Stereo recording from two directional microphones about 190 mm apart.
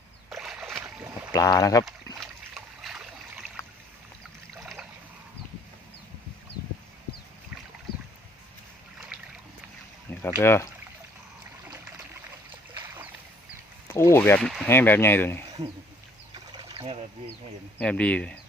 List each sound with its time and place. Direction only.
0.3 s boat: centre (ahead or behind)
1.3 s speech: 20° left (ahead or behind)
2.2 s boat: centre (ahead or behind)
4.5 s a sound: centre (ahead or behind)
10.2 s speech: 15° left (ahead or behind)
13.8 s speech: 15° left (ahead or behind)
16.3 s a sound: 25° right (ahead or behind)
17.7 s speech: 5° left (ahead or behind)